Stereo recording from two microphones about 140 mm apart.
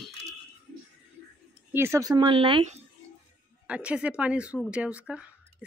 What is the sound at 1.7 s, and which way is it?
Speech, 20° right (ahead or behind).